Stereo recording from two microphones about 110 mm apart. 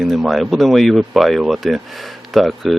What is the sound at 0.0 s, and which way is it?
Speech, centre (ahead or behind).